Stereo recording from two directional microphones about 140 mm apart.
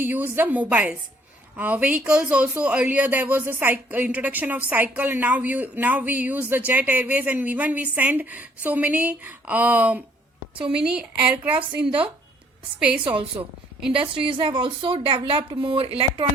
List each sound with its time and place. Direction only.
0.0 s a woman's voice: 15° right (ahead or behind)
14.0 s speech: 35° right (ahead or behind)